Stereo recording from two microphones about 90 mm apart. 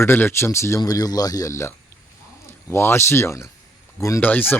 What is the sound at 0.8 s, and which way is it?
Speech, 45° left (ahead or behind).